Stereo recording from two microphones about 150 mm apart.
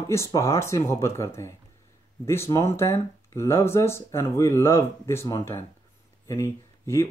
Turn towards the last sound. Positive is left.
turn(degrees=20)  # may be behind; listen again after turning